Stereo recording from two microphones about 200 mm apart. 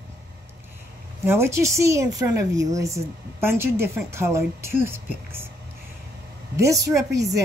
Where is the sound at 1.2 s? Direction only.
15° right (ahead or behind).